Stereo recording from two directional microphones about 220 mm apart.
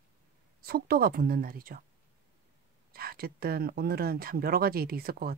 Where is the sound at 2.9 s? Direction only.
45° right (ahead or behind).